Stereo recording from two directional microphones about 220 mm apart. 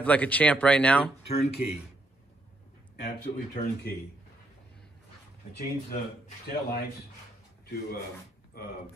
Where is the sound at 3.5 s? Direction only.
40° left (ahead or behind).